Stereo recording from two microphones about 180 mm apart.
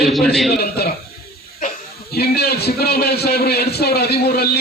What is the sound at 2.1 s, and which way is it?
A man's voice, 60° left (ahead or behind).